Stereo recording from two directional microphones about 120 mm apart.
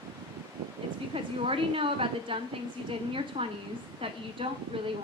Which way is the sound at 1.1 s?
50° right (ahead or behind).